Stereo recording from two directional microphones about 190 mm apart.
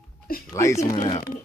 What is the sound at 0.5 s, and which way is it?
Speech, 15° left (ahead or behind).